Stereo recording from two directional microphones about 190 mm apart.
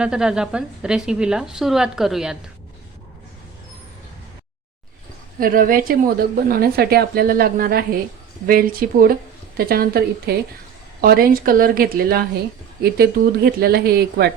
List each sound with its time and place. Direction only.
0.0 s a woman's voice: 5° right (ahead or behind)
5.4 s a woman's voice: 45° right (ahead or behind)